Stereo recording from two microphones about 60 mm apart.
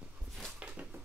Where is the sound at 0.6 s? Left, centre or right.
Right.